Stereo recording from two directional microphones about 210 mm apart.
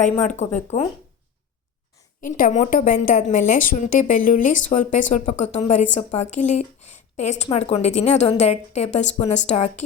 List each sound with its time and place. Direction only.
0.3 s a woman's voice: 35° left (ahead or behind)
2.2 s a woman's voice: 40° left (ahead or behind)